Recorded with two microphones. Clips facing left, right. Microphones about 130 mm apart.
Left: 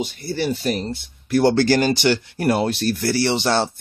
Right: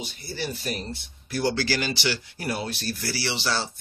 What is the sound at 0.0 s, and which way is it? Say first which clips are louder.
Speech: left 9 dB; 60° left (ahead or behind).